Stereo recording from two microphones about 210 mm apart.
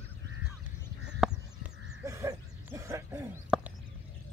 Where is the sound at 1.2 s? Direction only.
10° right (ahead or behind).